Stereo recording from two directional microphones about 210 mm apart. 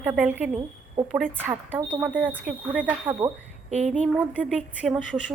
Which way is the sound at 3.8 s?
Centre (ahead or behind).